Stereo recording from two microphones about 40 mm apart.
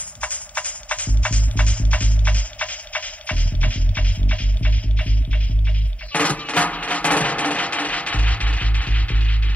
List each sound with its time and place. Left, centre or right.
0.2 s music: left
6.1 s music: left